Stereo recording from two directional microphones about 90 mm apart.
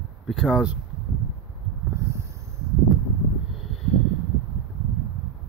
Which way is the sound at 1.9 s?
30° right (ahead or behind).